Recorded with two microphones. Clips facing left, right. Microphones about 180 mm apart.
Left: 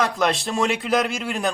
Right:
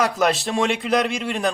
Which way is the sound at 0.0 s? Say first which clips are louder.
Right 2 dB; 5° right (ahead or behind).